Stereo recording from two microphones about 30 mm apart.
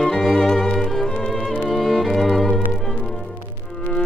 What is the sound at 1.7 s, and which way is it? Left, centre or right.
Music, centre.